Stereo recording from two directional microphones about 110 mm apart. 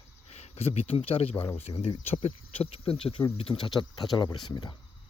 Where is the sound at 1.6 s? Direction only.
70° left (ahead or behind).